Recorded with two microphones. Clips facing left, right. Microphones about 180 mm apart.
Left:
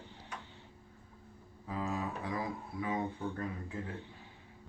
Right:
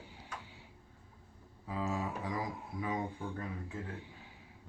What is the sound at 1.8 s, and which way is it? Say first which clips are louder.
Speech: even; 25° right (ahead or behind).